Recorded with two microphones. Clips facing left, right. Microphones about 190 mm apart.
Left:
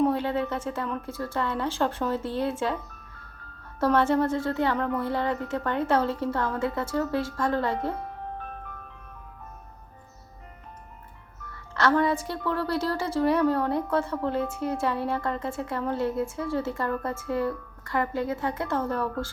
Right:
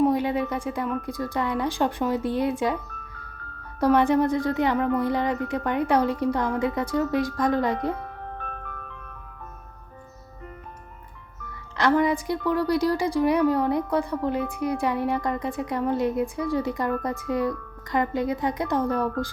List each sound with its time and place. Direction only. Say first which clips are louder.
0.0 s a woman's voice: right 2 dB; 15° right (ahead or behind)
3.8 s a woman's voice: right 3 dB; 15° right (ahead or behind)
11.8 s a woman's voice: right 2 dB; 15° right (ahead or behind)